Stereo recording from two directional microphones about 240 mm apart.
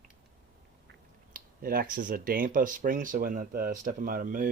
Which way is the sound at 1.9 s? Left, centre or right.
Right.